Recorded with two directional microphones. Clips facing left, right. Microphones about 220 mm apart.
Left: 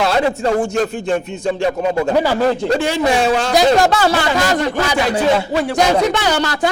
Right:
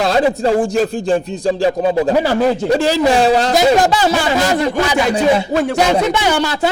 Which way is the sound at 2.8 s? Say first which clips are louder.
Right 4 dB; 35° right (ahead or behind).